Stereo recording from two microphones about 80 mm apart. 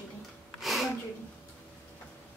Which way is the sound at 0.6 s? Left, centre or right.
Centre.